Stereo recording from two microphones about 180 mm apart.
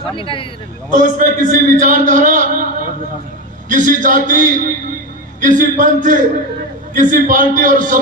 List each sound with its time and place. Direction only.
0.2 s speech: 30° left (ahead or behind)
0.9 s a man's voice: 45° right (ahead or behind)
3.7 s a man's voice: 45° right (ahead or behind)